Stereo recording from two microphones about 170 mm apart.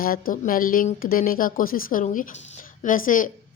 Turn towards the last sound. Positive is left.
turn(degrees=50)  # may be behind; listen again after turning